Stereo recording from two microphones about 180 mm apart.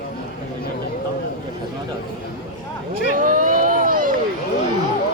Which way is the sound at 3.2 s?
50° right (ahead or behind).